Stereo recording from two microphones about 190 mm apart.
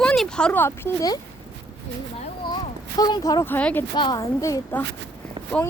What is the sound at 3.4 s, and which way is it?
Speech, 10° left (ahead or behind).